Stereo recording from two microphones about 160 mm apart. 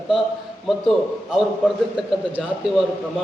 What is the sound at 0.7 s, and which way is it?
Speech, centre (ahead or behind).